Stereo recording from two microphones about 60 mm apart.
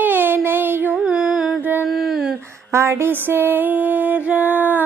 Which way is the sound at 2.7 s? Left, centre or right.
Right.